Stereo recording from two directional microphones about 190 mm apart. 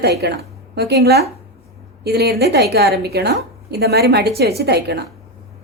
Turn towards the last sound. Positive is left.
turn(degrees=-60)  # may be behind; listen again after turning